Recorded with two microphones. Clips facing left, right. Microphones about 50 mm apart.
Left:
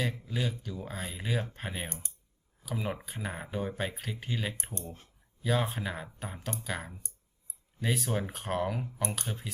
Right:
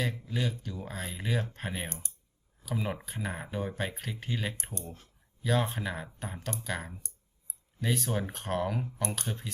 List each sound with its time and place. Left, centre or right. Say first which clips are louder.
0.0 s speech: even; centre
1.9 s speech: right 1 dB; left
2.6 s speech: right 1 dB; centre